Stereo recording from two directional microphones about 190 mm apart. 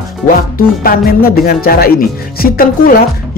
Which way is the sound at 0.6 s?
50° left (ahead or behind).